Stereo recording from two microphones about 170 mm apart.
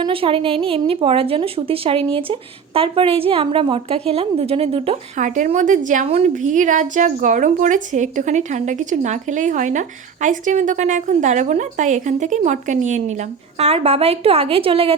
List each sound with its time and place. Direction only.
0.0 s a woman's voice: 30° right (ahead or behind)
5.1 s a woman's voice: 45° right (ahead or behind)